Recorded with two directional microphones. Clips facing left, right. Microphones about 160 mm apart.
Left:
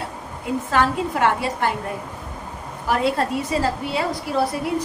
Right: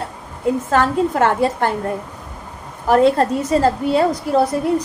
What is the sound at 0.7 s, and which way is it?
A woman's voice, 45° right (ahead or behind).